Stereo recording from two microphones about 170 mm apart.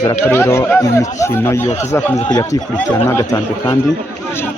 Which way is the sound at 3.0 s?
15° left (ahead or behind).